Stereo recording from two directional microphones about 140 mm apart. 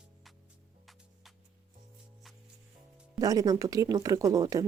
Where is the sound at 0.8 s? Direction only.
Centre (ahead or behind).